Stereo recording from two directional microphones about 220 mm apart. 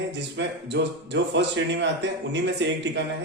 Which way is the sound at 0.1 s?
50° right (ahead or behind).